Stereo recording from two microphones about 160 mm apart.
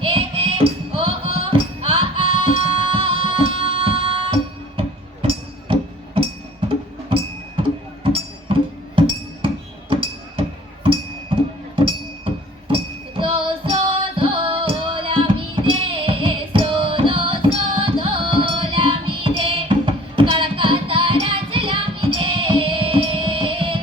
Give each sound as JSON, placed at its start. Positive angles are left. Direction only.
{"t": 0.0, "sound": "music", "side_deg": -35}
{"t": 9.9, "sound": "music", "side_deg": -35}
{"t": 11.8, "sound": "music", "side_deg": -35}